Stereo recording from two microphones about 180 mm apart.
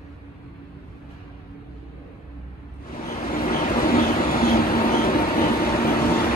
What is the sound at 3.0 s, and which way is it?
Vehicle, 50° left (ahead or behind).